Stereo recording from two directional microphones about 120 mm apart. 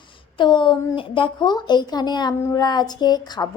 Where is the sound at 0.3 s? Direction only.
40° left (ahead or behind).